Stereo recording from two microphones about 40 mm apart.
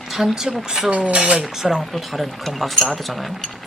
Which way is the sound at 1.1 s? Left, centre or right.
Right.